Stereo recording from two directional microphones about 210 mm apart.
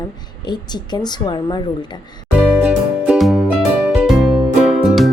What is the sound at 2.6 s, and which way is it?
Music, 5° right (ahead or behind).